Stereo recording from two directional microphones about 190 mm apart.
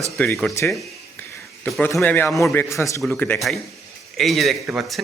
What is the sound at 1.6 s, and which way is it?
A man's voice, centre (ahead or behind).